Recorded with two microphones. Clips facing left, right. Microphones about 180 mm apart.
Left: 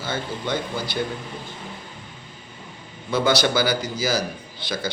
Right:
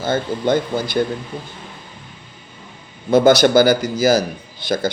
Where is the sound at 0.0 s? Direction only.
45° right (ahead or behind).